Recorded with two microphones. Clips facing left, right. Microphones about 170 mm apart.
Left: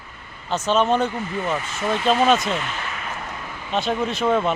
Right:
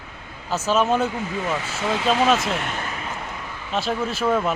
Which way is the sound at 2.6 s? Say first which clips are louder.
Right 1 dB; 45° right (ahead or behind).